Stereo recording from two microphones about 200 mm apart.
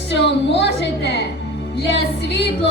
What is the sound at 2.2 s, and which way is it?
Speech, 55° left (ahead or behind).